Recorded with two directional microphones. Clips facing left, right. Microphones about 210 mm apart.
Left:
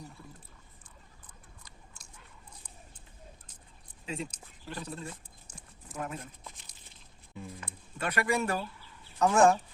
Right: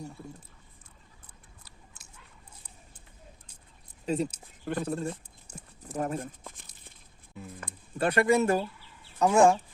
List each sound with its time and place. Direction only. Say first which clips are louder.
4.0 s speech: right 9 dB; 40° right (ahead or behind)
4.6 s speech: right 9 dB; 55° right (ahead or behind)
5.5 s clip-clop: right 7 dB; 10° right (ahead or behind)
5.9 s speech: right 7 dB; 40° right (ahead or behind)
7.3 s speech: even; 5° right (ahead or behind)
7.9 s speech: right 7 dB; 30° right (ahead or behind)
9.1 s speech: right 2 dB; 15° right (ahead or behind)